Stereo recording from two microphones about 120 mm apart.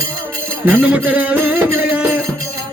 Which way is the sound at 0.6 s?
10° right (ahead or behind).